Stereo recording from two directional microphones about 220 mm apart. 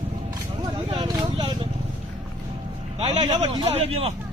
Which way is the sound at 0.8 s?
20° right (ahead or behind).